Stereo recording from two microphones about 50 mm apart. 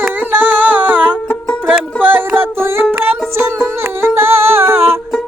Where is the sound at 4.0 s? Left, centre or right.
Right.